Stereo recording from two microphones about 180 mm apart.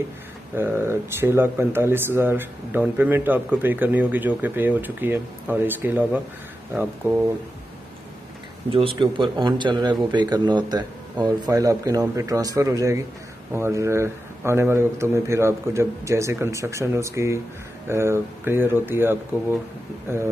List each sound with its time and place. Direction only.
0.6 s speech: 10° right (ahead or behind)
8.7 s speech: 30° right (ahead or behind); by 20.2 s 15° right (ahead or behind)